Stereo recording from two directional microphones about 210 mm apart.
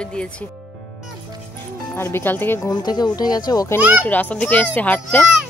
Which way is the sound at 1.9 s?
10° left (ahead or behind).